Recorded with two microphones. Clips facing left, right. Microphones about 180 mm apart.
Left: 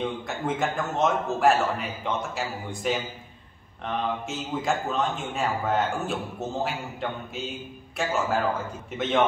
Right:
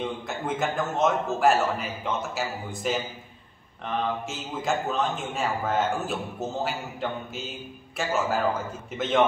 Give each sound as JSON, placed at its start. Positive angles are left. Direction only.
{"t": 0.0, "sound": "a man's voice", "side_deg": 0}